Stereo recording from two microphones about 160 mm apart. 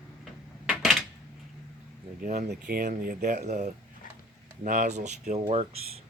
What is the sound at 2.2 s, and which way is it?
Speech, 65° right (ahead or behind).